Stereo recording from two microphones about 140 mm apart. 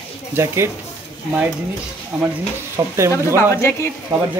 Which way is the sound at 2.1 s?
5° right (ahead or behind).